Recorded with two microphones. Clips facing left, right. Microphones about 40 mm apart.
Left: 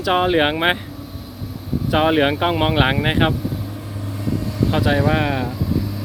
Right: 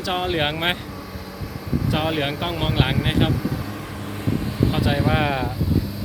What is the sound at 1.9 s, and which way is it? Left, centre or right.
Speech, left.